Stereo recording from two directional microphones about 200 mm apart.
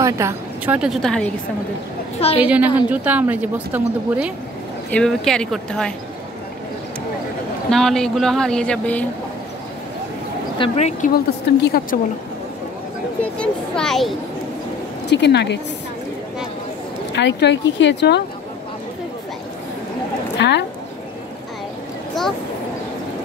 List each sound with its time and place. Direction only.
0.0 s a woman's voice: 15° right (ahead or behind); by 1.3 s 5° left (ahead or behind)
2.1 s a woman's voice: 30° left (ahead or behind)
2.4 s speech: 5° right (ahead or behind)
4.9 s speech: centre (ahead or behind)
7.7 s speech: centre (ahead or behind)
10.6 s speech: 35° left (ahead or behind)
11.6 s a woman's voice: 50° left (ahead or behind)
13.2 s speech: 5° left (ahead or behind)
15.0 s speech: 60° left (ahead or behind)
17.1 s speech: 60° left (ahead or behind)
20.3 s a woman's voice: 60° left (ahead or behind)
22.2 s a sound: centre (ahead or behind)